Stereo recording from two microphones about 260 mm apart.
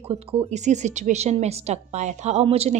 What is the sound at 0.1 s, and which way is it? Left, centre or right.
A woman's voice, right.